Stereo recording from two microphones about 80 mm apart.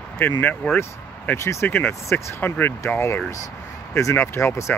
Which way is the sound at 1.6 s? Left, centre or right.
Left.